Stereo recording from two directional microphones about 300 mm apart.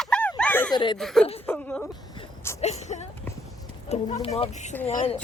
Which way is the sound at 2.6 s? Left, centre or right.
Left.